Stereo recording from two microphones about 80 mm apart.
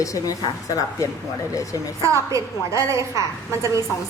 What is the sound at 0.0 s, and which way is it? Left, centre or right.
A woman's voice, left.